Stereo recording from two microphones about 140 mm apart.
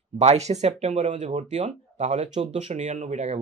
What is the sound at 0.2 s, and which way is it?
Speech, 50° right (ahead or behind).